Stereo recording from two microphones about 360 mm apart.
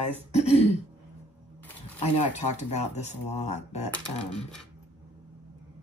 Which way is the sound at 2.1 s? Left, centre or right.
Centre.